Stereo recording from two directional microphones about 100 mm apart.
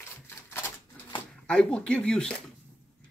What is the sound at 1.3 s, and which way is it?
Speech, 10° left (ahead or behind).